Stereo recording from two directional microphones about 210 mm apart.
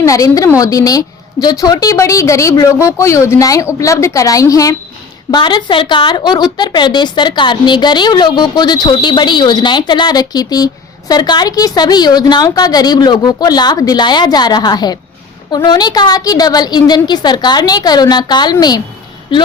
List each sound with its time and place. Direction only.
0.0 s a woman's voice: 15° left (ahead or behind)